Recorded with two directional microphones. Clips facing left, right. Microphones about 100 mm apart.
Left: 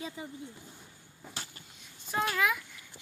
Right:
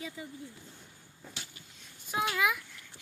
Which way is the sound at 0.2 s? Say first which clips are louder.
Left 2 dB; 25° left (ahead or behind).